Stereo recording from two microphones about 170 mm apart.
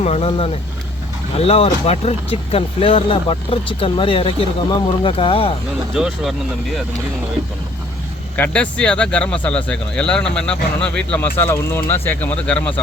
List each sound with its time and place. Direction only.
0.0 s speech: 40° left (ahead or behind)
5.9 s speech: 5° right (ahead or behind)
8.4 s speech: 5° left (ahead or behind)